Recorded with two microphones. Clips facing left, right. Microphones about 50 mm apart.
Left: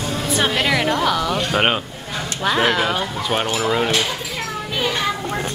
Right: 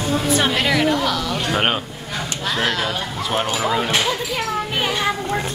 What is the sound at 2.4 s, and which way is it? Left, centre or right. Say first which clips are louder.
Speech: left 4 dB; centre.